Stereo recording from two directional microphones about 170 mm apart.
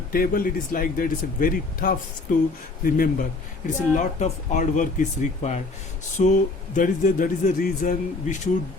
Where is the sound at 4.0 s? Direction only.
45° left (ahead or behind).